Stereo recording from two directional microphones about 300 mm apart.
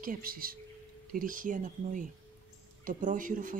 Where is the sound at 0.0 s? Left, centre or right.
Right.